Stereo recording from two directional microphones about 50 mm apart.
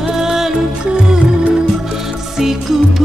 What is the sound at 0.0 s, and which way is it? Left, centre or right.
Music, centre.